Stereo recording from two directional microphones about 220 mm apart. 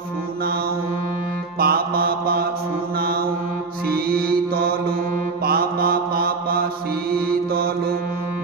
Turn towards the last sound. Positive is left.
turn(degrees=-40)  # may be behind; listen again after turning